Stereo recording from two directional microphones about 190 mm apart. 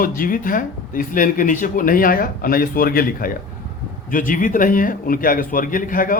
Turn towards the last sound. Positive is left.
turn(degrees=45)  # may be behind; listen again after turning